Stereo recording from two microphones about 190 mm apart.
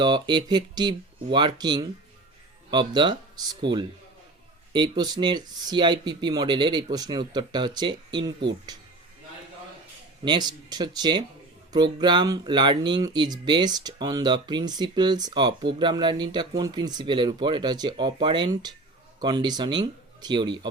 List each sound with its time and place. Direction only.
0.0 s speech: 25° right (ahead or behind)
10.2 s speech: 20° right (ahead or behind)